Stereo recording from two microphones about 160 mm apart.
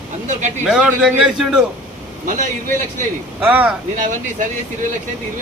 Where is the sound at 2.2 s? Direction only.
50° right (ahead or behind).